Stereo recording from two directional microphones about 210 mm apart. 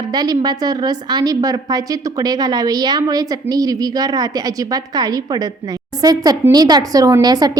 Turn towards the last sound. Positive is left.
turn(degrees=-20)  # may be behind; listen again after turning